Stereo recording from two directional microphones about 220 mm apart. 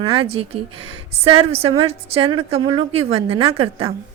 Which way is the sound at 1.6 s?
25° right (ahead or behind).